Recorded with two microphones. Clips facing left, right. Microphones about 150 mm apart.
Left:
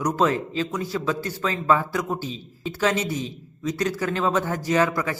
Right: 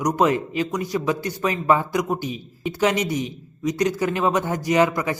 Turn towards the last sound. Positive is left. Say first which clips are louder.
# right 3 dB
turn(degrees=-20)  # may be behind; listen again after turning